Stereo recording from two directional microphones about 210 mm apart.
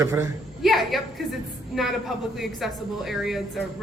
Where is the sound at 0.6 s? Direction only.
Centre (ahead or behind).